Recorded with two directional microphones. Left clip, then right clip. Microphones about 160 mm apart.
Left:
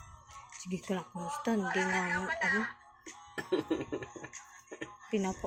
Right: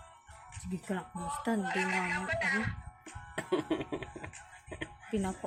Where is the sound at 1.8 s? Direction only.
35° right (ahead or behind).